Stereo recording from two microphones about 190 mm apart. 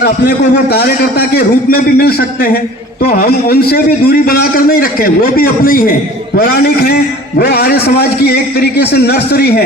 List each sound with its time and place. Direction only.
0.0 s a man's voice: 60° left (ahead or behind)